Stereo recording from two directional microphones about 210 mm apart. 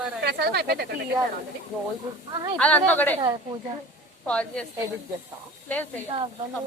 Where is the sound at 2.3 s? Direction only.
20° right (ahead or behind).